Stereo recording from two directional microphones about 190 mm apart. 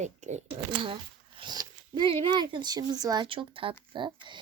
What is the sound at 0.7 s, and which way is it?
Speech, 25° right (ahead or behind).